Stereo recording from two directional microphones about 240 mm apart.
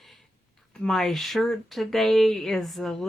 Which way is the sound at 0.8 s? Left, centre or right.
Centre.